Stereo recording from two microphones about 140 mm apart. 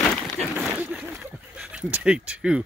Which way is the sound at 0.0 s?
5° left (ahead or behind).